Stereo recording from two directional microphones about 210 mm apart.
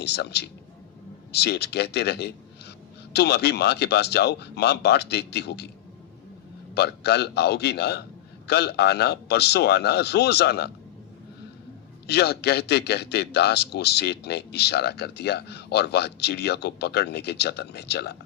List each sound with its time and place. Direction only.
0.0 s a man's voice: 50° left (ahead or behind)
6.7 s a man's voice: 50° left (ahead or behind)
12.0 s a man's voice: 50° left (ahead or behind)